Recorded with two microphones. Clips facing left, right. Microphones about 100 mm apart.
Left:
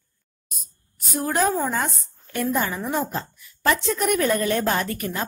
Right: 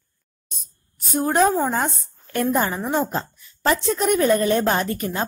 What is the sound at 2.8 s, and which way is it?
A woman's voice, 20° right (ahead or behind).